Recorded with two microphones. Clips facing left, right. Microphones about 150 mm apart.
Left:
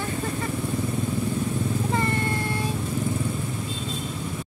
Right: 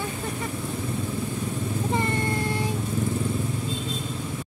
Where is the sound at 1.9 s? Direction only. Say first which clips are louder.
Right 2 dB; 20° right (ahead or behind).